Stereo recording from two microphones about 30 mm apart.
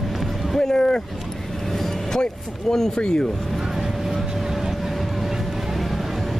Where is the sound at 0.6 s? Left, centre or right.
Left.